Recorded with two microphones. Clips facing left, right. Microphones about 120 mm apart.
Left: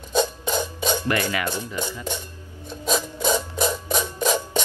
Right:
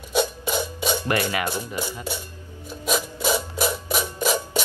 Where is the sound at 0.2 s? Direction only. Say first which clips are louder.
Left 1 dB; 10° right (ahead or behind).